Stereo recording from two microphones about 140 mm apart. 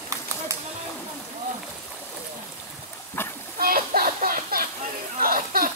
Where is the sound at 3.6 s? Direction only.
90° right.